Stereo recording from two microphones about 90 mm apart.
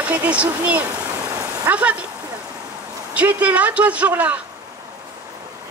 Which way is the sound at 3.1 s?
15° right (ahead or behind).